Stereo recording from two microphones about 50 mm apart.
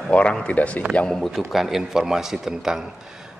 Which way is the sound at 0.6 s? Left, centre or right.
Left.